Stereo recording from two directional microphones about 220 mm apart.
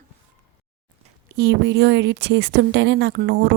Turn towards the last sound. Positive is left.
turn(degrees=-45)  # may be behind; listen again after turning